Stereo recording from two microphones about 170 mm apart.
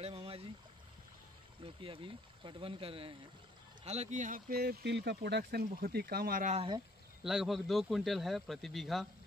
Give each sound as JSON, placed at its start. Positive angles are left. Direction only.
{"t": 0.0, "sound": "a sound", "side_deg": -35}
{"t": 1.6, "sound": "speech", "side_deg": -30}
{"t": 6.5, "sound": "speech", "side_deg": -30}
{"t": 7.2, "sound": "speech", "side_deg": 0}